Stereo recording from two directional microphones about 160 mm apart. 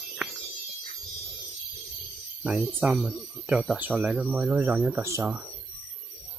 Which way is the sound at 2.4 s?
5° right (ahead or behind).